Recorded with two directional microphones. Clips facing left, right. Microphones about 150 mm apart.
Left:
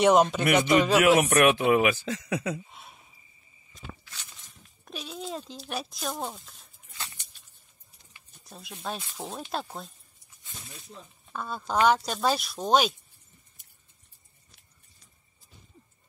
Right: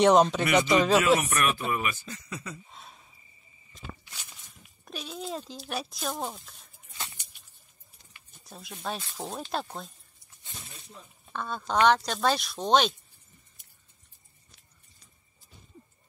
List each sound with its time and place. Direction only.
0.0 s speech: 5° left (ahead or behind)
1.2 s speech: 65° left (ahead or behind)
2.7 s a sound: 5° left (ahead or behind)
4.0 s walk: 10° right (ahead or behind)
4.8 s speech: centre (ahead or behind)
8.5 s speech: centre (ahead or behind)
11.3 s speech: 5° left (ahead or behind)